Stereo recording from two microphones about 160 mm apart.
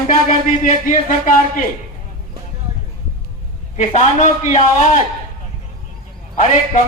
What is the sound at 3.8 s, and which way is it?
A man's voice, 50° left (ahead or behind).